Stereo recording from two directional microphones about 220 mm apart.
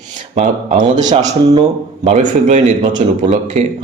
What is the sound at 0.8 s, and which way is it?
Speech, 20° right (ahead or behind).